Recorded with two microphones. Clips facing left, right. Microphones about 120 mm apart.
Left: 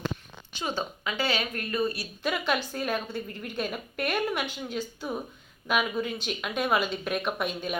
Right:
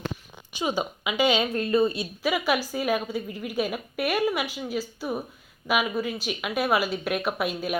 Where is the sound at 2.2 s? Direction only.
5° right (ahead or behind).